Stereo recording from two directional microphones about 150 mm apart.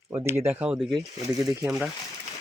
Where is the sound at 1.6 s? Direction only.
5° right (ahead or behind).